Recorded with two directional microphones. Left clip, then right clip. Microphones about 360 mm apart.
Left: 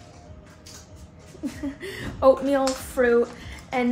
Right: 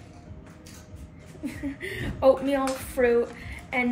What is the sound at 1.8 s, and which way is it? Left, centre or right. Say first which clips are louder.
Speech: left 2 dB; centre.